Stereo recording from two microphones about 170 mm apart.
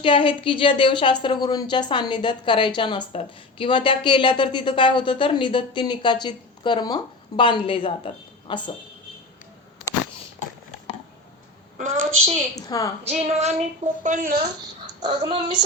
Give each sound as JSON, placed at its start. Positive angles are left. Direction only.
{"t": 0.0, "sound": "a woman's voice", "side_deg": 30}
{"t": 11.8, "sound": "a woman's voice", "side_deg": -45}
{"t": 12.5, "sound": "a woman's voice", "side_deg": 20}
{"t": 13.1, "sound": "a woman's voice", "side_deg": -40}
{"t": 15.0, "sound": "speech", "side_deg": -30}